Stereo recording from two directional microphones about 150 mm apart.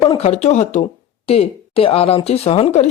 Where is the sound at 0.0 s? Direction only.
40° left (ahead or behind).